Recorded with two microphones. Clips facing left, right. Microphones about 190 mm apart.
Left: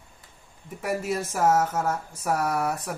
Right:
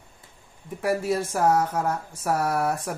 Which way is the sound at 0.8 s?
30° right (ahead or behind).